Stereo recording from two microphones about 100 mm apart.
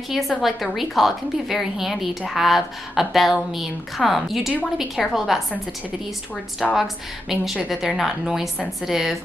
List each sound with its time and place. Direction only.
0.1 s a woman's voice: centre (ahead or behind)
6.7 s a woman's voice: 5° right (ahead or behind)